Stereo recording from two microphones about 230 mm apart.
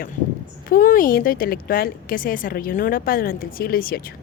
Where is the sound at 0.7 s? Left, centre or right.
Left.